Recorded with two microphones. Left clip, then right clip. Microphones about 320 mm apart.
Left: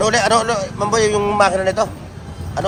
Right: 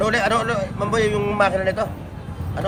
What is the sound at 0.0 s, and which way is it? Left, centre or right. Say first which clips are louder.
A man's voice: left 4 dB; centre.